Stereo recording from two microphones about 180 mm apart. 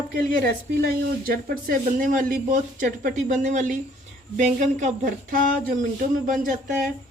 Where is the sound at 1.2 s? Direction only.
55° right (ahead or behind).